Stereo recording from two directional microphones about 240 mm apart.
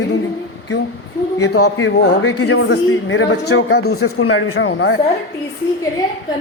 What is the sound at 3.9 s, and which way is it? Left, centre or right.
Speech, left.